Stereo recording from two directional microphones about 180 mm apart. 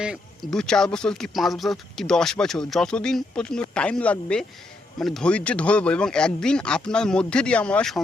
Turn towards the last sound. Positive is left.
turn(degrees=5)  # may be behind; listen again after turning